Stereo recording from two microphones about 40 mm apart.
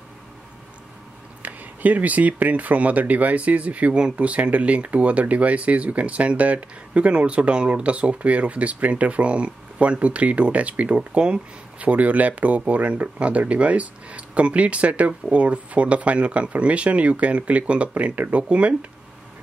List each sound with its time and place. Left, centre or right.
1.4 s speech: right